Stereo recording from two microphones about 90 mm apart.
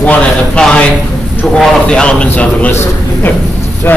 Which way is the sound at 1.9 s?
10° left (ahead or behind).